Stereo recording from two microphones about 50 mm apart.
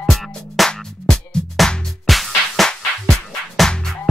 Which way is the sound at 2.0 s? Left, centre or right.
Centre.